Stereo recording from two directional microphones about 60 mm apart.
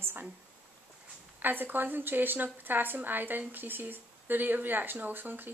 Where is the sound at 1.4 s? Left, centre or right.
Right.